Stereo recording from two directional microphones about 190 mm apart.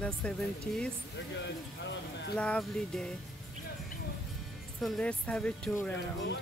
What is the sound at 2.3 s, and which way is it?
Speech, 5° left (ahead or behind).